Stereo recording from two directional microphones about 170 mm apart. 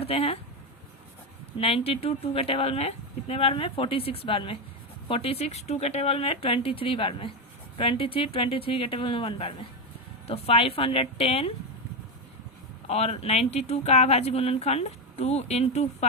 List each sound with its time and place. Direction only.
0.0 s speech: 35° left (ahead or behind)
1.5 s speech: 35° left (ahead or behind)
12.9 s speech: 40° left (ahead or behind)